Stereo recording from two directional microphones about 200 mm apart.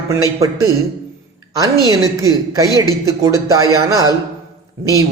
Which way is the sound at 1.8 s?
15° right (ahead or behind).